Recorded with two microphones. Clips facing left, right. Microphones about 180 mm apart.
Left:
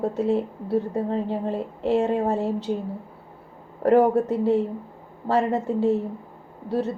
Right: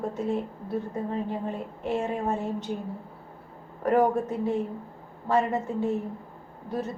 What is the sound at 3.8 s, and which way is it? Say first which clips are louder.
A woman's voice: left 5 dB; 35° left (ahead or behind).